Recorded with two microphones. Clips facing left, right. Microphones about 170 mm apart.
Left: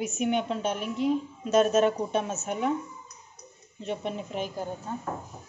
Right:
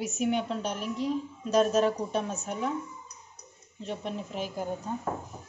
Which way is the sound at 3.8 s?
Centre (ahead or behind).